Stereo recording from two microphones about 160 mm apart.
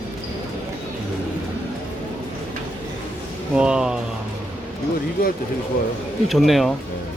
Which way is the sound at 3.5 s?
5° right (ahead or behind).